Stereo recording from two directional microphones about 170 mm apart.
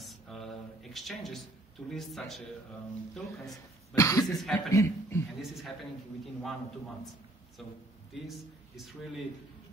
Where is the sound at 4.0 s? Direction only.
20° left (ahead or behind).